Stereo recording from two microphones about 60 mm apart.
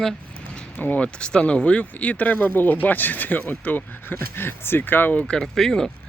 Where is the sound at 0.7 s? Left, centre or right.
Left.